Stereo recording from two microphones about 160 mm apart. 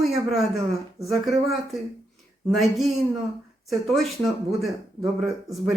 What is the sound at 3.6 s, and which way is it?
Speech, centre (ahead or behind).